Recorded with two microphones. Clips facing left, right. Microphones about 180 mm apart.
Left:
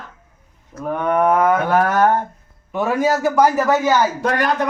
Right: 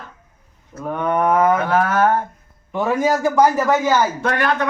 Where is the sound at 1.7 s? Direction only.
45° left (ahead or behind).